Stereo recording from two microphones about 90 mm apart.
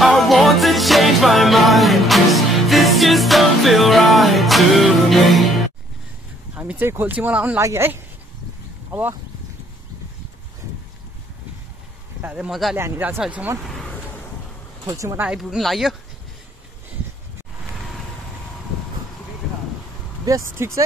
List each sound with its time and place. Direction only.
0.0 s music: centre (ahead or behind)
6.5 s speech: 20° right (ahead or behind)
7.5 s speech: 30° right (ahead or behind)
12.2 s speech: 10° right (ahead or behind)
12.7 s speech: 30° right (ahead or behind)
13.2 s speech: 15° right (ahead or behind)
14.9 s speech: 35° right (ahead or behind)
15.2 s speech: 10° right (ahead or behind)
20.2 s speech: 35° right (ahead or behind)